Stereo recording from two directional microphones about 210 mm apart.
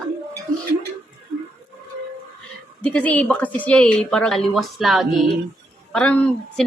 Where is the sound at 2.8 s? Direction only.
5° left (ahead or behind).